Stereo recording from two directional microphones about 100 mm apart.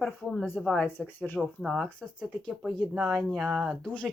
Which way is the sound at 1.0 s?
15° left (ahead or behind).